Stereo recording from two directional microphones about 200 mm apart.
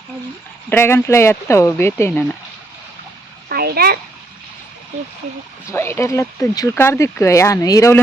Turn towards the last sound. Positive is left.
turn(degrees=15)  # may be behind; listen again after turning